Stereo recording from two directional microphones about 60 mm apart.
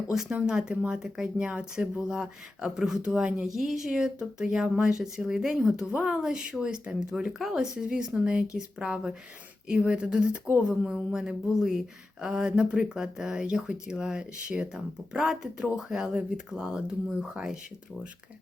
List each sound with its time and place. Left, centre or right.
0.3 s speech: centre
7.3 s speech: centre
7.5 s speech: centre